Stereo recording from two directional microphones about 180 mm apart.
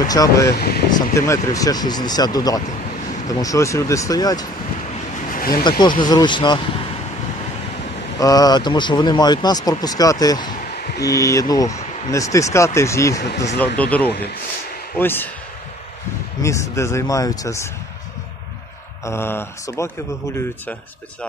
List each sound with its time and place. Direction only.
0.0 s speech: 20° left (ahead or behind)
0.5 s speech: 60° left (ahead or behind)
1.1 s speech: 15° left (ahead or behind)
5.3 s a sound: 55° left (ahead or behind)
5.6 s speech: 25° left (ahead or behind)
8.2 s speech: 20° left (ahead or behind)
16.4 s speech: 15° left (ahead or behind)
19.0 s speech: 15° left (ahead or behind)